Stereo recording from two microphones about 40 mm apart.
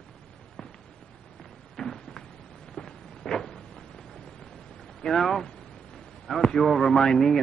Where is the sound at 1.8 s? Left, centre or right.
Centre.